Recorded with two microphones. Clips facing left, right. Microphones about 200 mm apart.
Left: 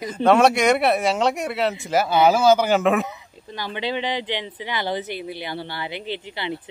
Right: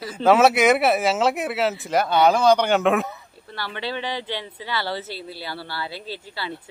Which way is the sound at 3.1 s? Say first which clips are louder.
Left 2 dB; 15° left (ahead or behind).